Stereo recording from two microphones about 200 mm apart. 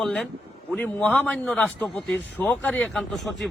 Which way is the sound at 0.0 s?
Centre (ahead or behind).